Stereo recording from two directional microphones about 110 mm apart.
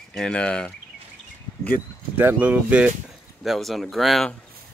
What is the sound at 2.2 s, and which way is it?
Speech, 15° right (ahead or behind).